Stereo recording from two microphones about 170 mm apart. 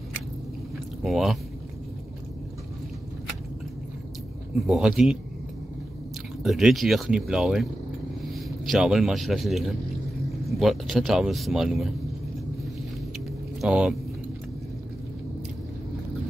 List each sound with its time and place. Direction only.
1.0 s speech: centre (ahead or behind)
4.6 s speech: centre (ahead or behind)
6.4 s speech: centre (ahead or behind)
13.6 s speech: 5° right (ahead or behind)